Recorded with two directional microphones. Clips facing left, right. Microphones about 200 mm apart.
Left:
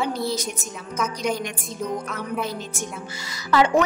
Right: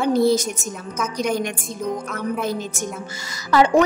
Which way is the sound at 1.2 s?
55° right (ahead or behind).